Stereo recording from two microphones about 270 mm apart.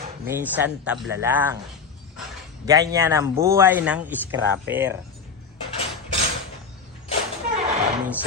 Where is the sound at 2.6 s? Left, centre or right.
Centre.